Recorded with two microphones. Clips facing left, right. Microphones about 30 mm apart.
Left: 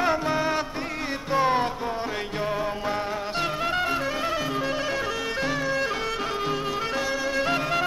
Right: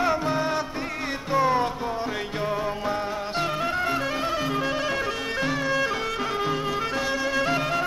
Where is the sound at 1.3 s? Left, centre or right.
Left.